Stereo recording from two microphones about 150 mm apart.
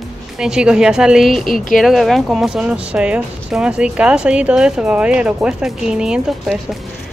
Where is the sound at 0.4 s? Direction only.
5° right (ahead or behind).